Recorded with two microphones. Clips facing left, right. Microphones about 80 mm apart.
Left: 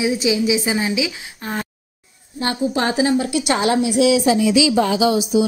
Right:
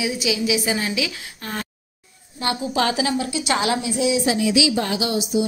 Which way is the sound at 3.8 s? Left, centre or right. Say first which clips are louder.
Left 6 dB; left.